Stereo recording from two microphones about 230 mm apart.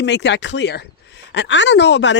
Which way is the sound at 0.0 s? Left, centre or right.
Left.